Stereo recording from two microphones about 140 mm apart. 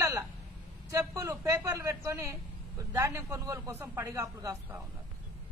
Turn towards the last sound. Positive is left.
turn(degrees=-20)  # may be behind; listen again after turning